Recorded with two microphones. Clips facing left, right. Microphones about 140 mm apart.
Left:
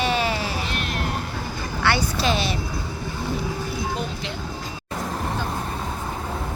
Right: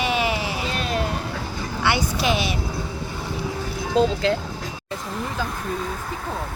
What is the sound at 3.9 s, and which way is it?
Speech, 90° right.